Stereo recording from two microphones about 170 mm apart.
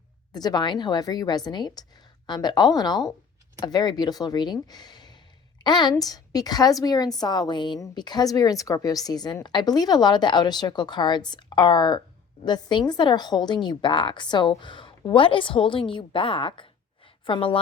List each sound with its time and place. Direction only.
0.3 s a woman's voice: 25° left (ahead or behind)